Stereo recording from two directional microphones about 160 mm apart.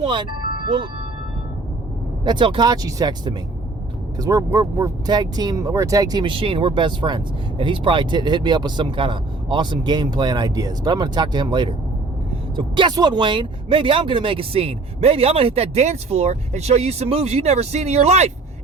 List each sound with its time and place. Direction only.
0.0 s music: 30° right (ahead or behind)
2.2 s speech: 30° right (ahead or behind)